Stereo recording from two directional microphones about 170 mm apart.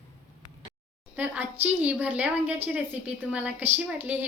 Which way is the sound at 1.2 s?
10° right (ahead or behind).